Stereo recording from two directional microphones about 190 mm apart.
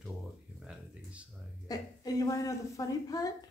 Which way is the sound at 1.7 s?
20° left (ahead or behind).